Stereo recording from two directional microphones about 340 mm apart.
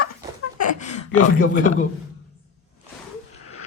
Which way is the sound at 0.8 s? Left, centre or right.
Left.